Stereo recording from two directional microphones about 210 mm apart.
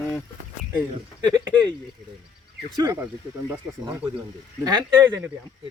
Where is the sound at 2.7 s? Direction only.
20° right (ahead or behind).